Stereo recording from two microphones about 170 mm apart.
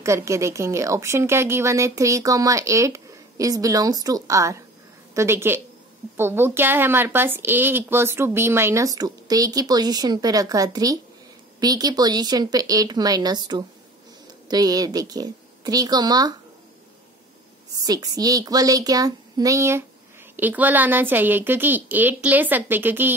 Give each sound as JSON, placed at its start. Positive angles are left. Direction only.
{"t": 0.0, "sound": "a woman's voice", "side_deg": -15}
{"t": 17.8, "sound": "a woman's voice", "side_deg": -20}